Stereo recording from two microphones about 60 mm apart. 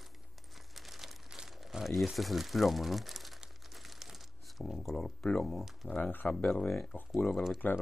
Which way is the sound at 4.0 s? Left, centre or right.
Centre.